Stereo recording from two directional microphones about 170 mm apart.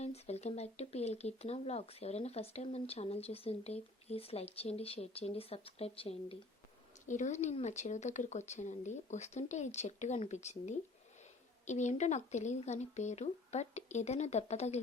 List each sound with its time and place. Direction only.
0.0 s speech: 40° left (ahead or behind)